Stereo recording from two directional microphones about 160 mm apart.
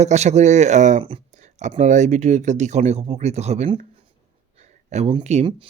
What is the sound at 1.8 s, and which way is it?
Speech, 45° right (ahead or behind).